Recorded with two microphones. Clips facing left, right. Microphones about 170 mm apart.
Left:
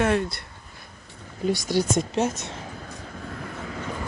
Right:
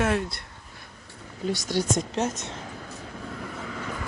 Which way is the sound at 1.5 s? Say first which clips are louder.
Left 3 dB; 10° left (ahead or behind).